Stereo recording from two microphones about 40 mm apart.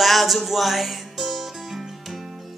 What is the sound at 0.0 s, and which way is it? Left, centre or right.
Music, centre.